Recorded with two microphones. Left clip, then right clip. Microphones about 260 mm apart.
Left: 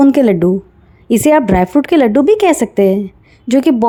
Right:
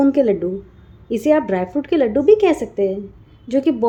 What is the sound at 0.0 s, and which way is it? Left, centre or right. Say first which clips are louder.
A woman's voice: left 6 dB; left.